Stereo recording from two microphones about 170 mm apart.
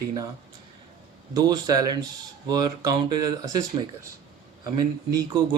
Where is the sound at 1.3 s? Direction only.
25° right (ahead or behind).